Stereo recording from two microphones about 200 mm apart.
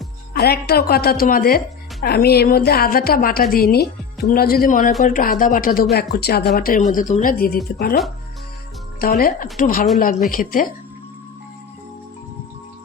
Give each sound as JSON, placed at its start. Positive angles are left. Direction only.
{"t": 0.3, "sound": "speech", "side_deg": 50}